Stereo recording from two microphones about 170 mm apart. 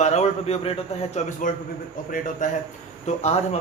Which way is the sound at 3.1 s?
40° left (ahead or behind).